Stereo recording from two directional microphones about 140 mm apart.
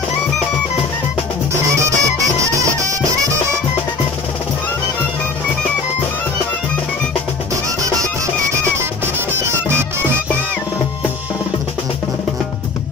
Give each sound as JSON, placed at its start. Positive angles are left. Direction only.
{"t": 1.5, "sound": "music", "side_deg": -20}
{"t": 8.7, "sound": "music", "side_deg": -15}